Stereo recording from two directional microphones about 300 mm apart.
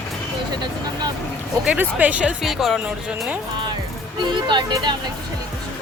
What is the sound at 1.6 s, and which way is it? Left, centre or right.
Speech, centre.